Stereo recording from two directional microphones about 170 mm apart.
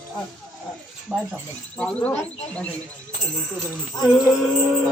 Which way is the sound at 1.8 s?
5° left (ahead or behind).